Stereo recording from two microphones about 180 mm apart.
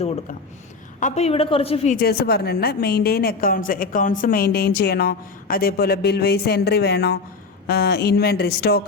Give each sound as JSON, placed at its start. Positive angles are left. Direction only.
{"t": 0.9, "sound": "a woman's voice", "side_deg": 40}
{"t": 2.0, "sound": "a woman's voice", "side_deg": 60}